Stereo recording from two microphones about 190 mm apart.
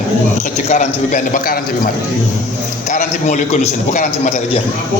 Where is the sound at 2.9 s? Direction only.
40° left (ahead or behind).